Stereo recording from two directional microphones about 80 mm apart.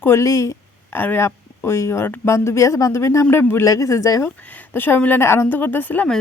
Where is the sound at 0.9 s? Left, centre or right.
Left.